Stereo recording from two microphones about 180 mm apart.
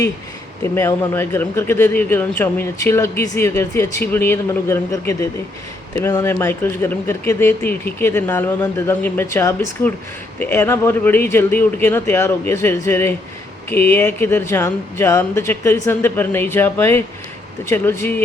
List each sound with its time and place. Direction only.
0.6 s speech: 15° left (ahead or behind)